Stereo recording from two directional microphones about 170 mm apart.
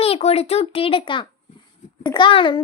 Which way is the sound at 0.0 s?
35° left (ahead or behind).